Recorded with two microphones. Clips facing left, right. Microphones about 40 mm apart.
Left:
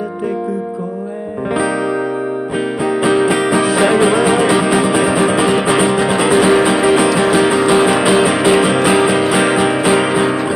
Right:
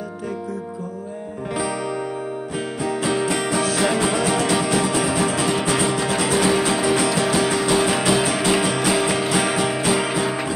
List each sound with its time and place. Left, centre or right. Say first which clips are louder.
2.8 s music: left 8 dB; centre